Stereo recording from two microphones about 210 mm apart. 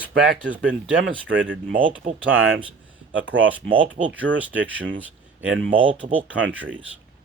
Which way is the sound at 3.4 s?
5° right (ahead or behind).